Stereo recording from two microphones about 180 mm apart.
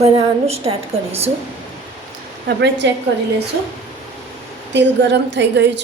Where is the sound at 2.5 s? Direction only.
70° right (ahead or behind).